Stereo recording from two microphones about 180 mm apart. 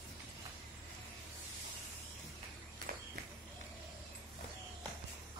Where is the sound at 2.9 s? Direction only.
50° right (ahead or behind).